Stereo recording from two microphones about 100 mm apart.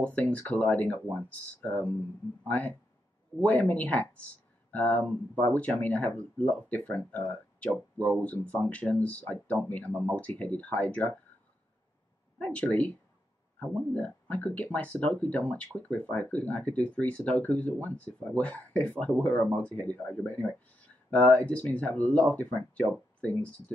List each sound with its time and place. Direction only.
0.0 s speech: 15° left (ahead or behind)
12.4 s speech: 15° left (ahead or behind)